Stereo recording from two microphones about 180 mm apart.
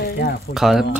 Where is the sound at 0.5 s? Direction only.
Centre (ahead or behind).